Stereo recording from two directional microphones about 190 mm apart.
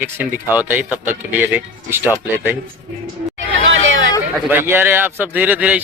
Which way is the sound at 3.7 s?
80° right.